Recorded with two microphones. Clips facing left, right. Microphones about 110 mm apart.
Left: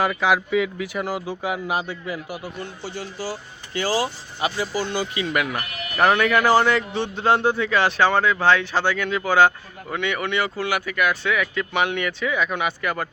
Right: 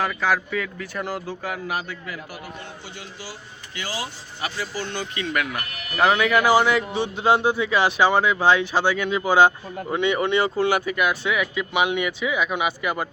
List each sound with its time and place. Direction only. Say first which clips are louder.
0.0 s speech: left 3 dB; 15° left (ahead or behind); by 4.1 s 40° left (ahead or behind)
4.4 s speech: left 5 dB; 20° left (ahead or behind); by 13.1 s 15° right (ahead or behind)